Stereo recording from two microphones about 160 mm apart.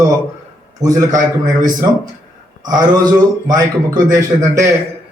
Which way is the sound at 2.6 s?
25° right (ahead or behind).